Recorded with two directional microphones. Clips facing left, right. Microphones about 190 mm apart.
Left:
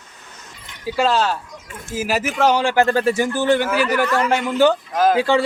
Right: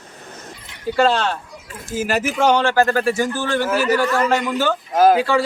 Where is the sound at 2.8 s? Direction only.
25° left (ahead or behind).